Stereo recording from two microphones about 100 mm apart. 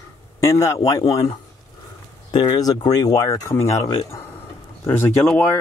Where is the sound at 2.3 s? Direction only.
45° left (ahead or behind).